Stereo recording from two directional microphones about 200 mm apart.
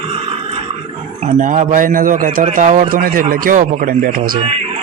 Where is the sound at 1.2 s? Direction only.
40° right (ahead or behind).